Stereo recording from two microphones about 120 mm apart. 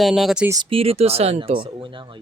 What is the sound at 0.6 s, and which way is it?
Speech, 50° right (ahead or behind).